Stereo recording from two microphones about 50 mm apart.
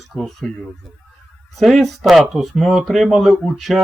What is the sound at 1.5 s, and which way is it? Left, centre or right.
A man's voice, centre.